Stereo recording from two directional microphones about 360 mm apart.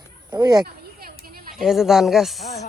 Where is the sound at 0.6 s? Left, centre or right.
Right.